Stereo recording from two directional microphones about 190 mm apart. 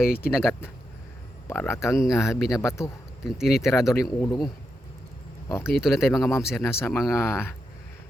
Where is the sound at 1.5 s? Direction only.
15° left (ahead or behind).